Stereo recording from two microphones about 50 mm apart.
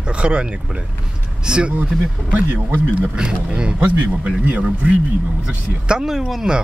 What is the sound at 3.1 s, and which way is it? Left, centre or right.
Speech, centre.